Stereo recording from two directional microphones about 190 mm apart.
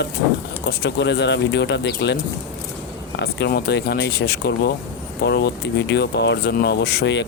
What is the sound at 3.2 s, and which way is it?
Speech, 55° left (ahead or behind).